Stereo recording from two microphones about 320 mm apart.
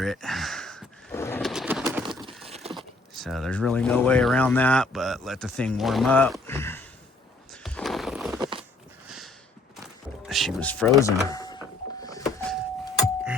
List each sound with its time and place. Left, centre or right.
0.0 s pigeon: centre
2.7 s speech: centre
7.5 s horse: centre
8.4 s a sound: centre
9.0 s a sound: centre
10.2 s speech: centre
12.0 s power windows: centre